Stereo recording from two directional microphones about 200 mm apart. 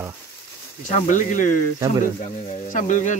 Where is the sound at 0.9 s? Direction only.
40° left (ahead or behind).